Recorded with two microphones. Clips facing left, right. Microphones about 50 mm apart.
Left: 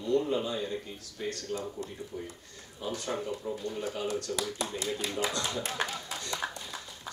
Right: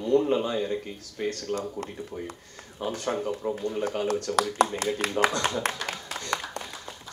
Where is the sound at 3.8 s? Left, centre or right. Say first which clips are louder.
Right 5 dB; right.